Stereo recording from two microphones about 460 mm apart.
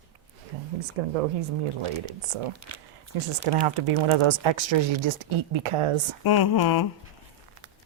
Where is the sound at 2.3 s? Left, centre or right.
Right.